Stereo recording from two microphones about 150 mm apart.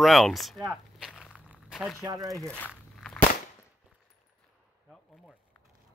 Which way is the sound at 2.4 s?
5° left (ahead or behind).